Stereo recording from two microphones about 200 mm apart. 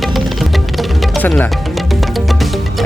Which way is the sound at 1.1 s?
5° left (ahead or behind).